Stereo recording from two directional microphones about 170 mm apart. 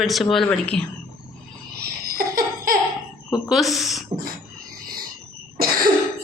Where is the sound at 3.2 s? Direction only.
15° left (ahead or behind).